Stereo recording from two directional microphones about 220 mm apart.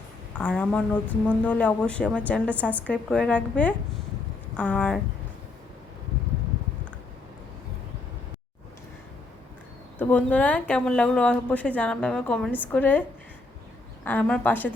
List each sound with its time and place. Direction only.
0.3 s a woman's voice: 5° left (ahead or behind)
10.0 s speech: 5° left (ahead or behind)
14.0 s a woman's voice: 5° left (ahead or behind)